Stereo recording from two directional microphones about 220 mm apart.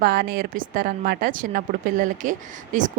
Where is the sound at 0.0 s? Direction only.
40° right (ahead or behind).